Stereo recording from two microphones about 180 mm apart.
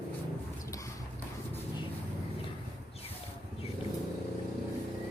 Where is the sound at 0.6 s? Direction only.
15° left (ahead or behind).